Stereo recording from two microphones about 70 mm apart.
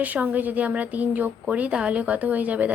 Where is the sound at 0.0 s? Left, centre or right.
Right.